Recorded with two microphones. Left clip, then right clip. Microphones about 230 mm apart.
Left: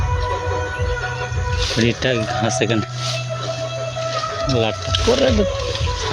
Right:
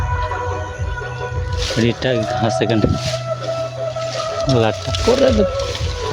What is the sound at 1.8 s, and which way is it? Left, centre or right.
Speech, centre.